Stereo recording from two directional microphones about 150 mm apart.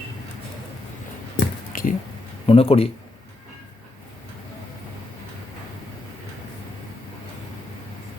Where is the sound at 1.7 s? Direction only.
70° left (ahead or behind).